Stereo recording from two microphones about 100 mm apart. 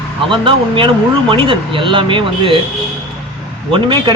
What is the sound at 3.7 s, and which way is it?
Speech, 55° right (ahead or behind).